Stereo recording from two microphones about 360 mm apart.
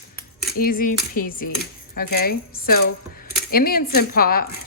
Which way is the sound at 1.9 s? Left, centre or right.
Left.